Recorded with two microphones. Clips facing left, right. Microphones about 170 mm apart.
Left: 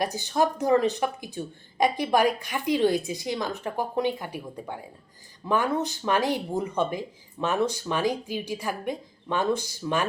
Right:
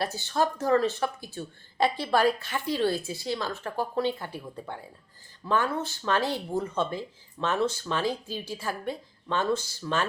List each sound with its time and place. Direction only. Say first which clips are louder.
0.0 s a woman's voice: left 3 dB; 15° left (ahead or behind)